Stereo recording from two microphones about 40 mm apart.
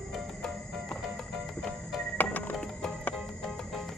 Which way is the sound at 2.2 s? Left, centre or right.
Left.